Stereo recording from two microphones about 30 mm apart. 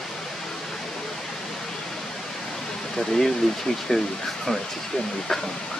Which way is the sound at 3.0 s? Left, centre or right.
Centre.